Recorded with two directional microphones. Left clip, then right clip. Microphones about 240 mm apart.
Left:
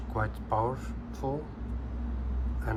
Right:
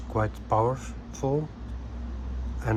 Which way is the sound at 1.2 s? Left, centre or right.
Right.